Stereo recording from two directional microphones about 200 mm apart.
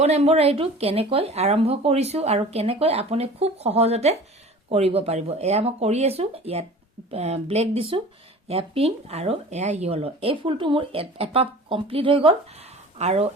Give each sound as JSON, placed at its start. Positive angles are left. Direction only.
{"t": 0.0, "sound": "speech", "side_deg": -30}